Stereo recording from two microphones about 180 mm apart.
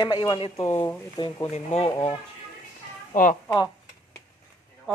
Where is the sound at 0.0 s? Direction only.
25° left (ahead or behind).